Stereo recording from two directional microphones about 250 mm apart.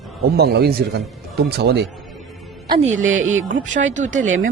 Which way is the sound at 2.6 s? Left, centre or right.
Right.